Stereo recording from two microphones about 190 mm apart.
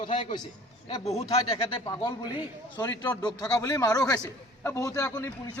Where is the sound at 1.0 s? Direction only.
35° left (ahead or behind); by 5.5 s 15° left (ahead or behind).